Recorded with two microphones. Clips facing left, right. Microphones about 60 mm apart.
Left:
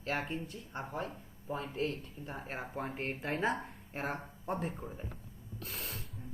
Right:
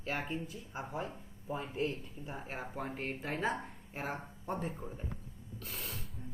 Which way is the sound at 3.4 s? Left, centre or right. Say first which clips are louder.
Left 1 dB; centre.